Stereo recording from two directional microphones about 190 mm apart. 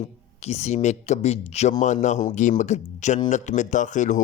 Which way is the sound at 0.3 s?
35° left (ahead or behind).